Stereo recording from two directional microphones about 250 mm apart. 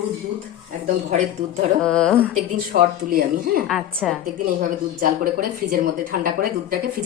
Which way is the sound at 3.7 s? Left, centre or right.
Centre.